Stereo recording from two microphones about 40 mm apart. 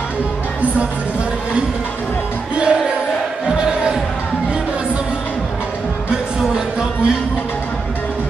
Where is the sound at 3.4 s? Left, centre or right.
Right.